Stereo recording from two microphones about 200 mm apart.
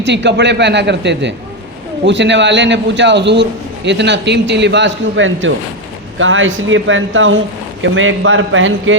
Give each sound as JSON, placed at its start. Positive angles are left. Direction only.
{"t": 0.0, "sound": "a man's voice", "side_deg": -60}